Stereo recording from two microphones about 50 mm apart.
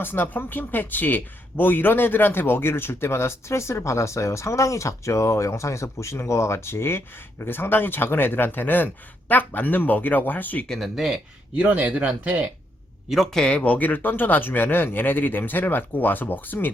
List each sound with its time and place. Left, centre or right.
0.0 s speech: left
10.7 s speech: centre
11.8 s speech: right
13.3 s speech: centre
13.6 s speech: left